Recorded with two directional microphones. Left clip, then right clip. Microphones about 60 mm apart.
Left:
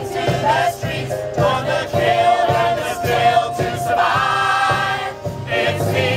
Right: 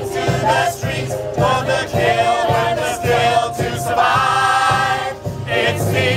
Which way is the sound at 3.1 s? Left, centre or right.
Right.